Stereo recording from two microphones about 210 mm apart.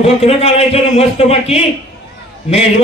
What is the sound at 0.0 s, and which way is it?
A man's voice, 30° left (ahead or behind).